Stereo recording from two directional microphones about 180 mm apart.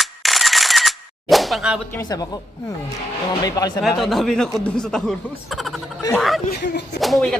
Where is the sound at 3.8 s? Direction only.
Centre (ahead or behind).